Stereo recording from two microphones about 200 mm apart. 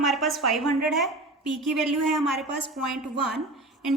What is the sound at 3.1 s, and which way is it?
Speech, 55° right (ahead or behind).